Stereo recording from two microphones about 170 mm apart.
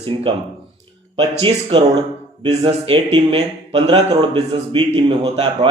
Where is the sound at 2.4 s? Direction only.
30° right (ahead or behind).